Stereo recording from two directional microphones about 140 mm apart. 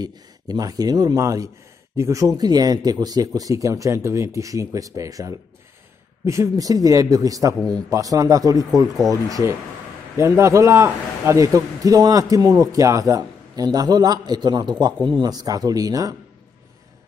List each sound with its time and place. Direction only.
0.0 s a man's voice: 25° right (ahead or behind)